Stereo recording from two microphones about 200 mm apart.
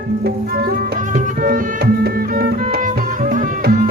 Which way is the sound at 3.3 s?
50° right (ahead or behind).